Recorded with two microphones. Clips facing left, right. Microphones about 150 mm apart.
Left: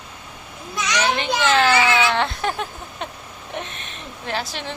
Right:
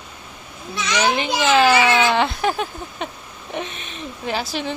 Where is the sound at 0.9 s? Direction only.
5° right (ahead or behind).